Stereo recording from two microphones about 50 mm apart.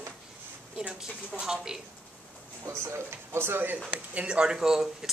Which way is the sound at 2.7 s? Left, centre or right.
Right.